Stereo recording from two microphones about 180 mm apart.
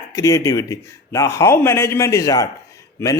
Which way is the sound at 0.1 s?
15° left (ahead or behind).